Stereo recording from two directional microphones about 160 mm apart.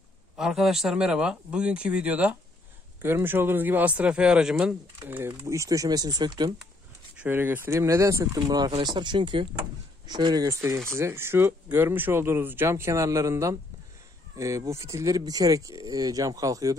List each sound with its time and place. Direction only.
0.4 s speech: 5° right (ahead or behind); by 6.5 s 25° right (ahead or behind)
7.2 s speech: 10° right (ahead or behind)